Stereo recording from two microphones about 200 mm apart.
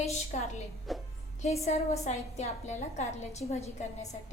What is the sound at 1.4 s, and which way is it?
A woman's voice, 35° left (ahead or behind).